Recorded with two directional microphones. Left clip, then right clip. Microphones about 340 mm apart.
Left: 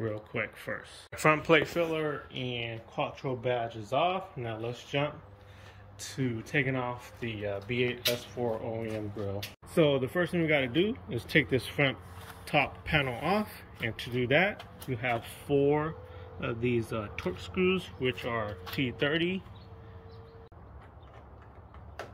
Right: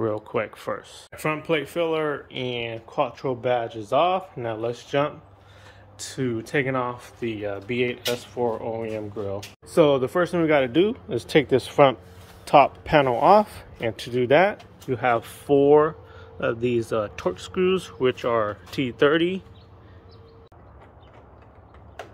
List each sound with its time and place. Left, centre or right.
0.0 s speech: centre
6.5 s speech: centre
10.0 s speech: right
10.8 s speech: centre
12.9 s speech: right
13.3 s a man's voice: centre
13.9 s speech: right
14.3 s speech: centre